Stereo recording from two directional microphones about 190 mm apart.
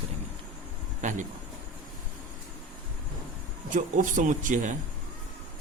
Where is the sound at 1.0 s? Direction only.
40° right (ahead or behind).